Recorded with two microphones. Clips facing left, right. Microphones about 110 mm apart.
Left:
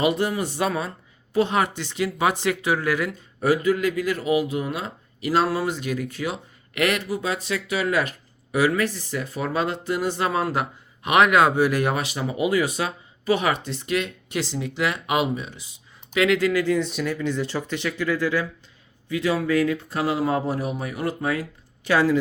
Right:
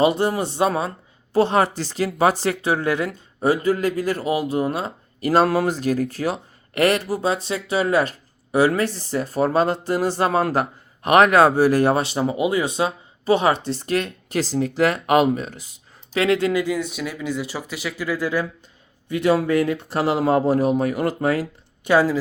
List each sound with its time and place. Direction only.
0.0 s speech: 30° right (ahead or behind); by 15.7 s 45° right (ahead or behind)
16.1 s speech: 30° right (ahead or behind)
16.6 s speech: 5° right (ahead or behind)
19.3 s speech: 30° right (ahead or behind)